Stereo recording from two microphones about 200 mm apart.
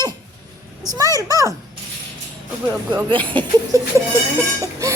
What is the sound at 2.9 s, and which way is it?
A child's voice, 25° right (ahead or behind).